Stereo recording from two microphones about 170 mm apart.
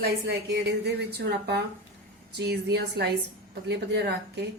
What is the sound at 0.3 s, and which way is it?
Speech, 75° right (ahead or behind).